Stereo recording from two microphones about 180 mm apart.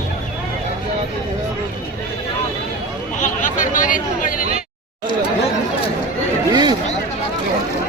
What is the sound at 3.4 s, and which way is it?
Speech, 45° left (ahead or behind).